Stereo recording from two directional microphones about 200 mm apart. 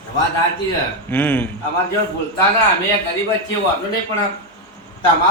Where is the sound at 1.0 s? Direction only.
10° left (ahead or behind).